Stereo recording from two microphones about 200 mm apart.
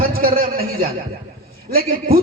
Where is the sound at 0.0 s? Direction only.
45° right (ahead or behind).